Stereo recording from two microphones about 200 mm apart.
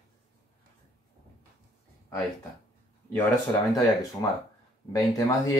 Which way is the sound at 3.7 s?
15° left (ahead or behind).